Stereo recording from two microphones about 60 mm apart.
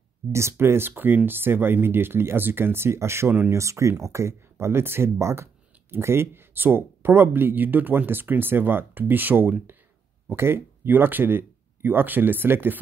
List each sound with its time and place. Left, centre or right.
0.3 s speech: right